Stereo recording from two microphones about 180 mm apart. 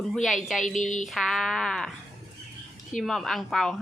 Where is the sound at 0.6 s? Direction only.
45° left (ahead or behind).